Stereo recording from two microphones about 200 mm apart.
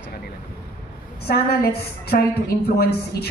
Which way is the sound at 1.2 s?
50° left (ahead or behind).